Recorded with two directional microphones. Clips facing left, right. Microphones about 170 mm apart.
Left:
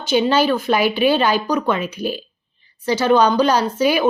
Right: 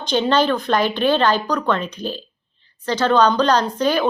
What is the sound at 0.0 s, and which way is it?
A woman's voice, 5° left (ahead or behind).